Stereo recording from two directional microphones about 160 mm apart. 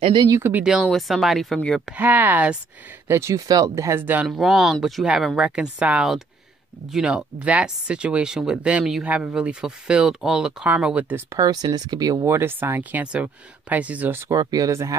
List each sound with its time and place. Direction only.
0.0 s speech: 30° right (ahead or behind)
0.4 s speech: 10° right (ahead or behind)
2.0 s speech: 10° right (ahead or behind)
11.3 s speech: 25° right (ahead or behind)
14.3 s speech: 25° right (ahead or behind)